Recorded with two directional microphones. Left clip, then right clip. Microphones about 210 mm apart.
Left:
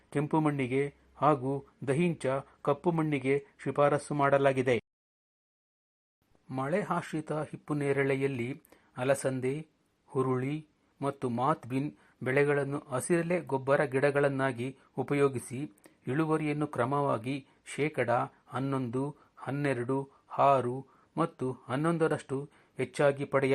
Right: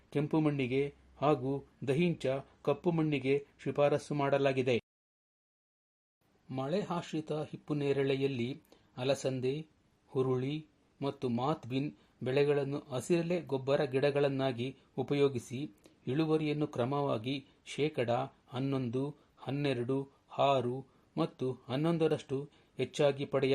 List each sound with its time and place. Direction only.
0.1 s a man's voice: 5° left (ahead or behind)
6.5 s a man's voice: 15° left (ahead or behind)
15.3 s speech: 40° left (ahead or behind)
16.0 s a man's voice: 5° left (ahead or behind)